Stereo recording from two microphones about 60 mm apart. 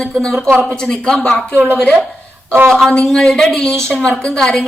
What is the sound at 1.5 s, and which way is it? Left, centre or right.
Speech, right.